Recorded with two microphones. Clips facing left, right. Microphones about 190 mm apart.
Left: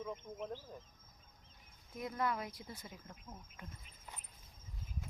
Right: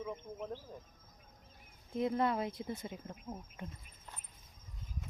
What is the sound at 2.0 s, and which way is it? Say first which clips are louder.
Speech: right 6 dB; 25° right (ahead or behind).